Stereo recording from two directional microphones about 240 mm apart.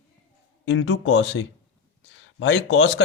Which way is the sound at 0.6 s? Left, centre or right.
Left.